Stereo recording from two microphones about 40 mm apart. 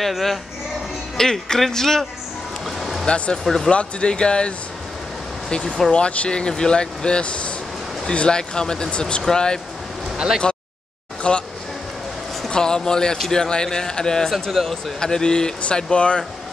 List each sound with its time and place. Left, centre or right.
0.0 s speech: centre
2.6 s a sound: centre
3.4 s speech: centre
3.7 s speech: left
10.1 s speech: centre
11.3 s speech: left
12.4 s speech: centre
14.5 s speech: centre
15.0 s speech: centre